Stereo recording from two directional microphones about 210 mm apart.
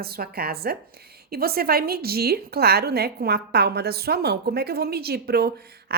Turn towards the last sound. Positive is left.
turn(degrees=-50)  # may be behind; listen again after turning